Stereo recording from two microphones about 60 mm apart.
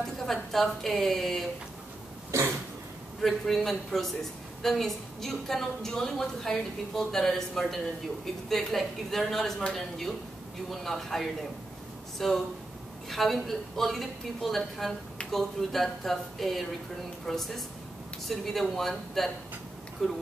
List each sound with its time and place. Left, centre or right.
0.0 s a woman's voice: centre
2.3 s a sound: right
3.2 s a woman's voice: centre